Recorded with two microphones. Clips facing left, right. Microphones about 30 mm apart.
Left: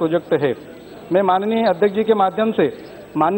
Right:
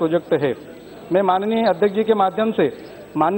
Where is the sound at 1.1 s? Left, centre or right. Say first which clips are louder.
Left 1 dB; centre.